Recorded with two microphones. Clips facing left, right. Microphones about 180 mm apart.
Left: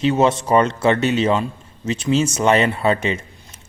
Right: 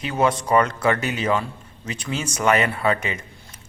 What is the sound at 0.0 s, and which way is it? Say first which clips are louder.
Speech: left 5 dB; 25° left (ahead or behind).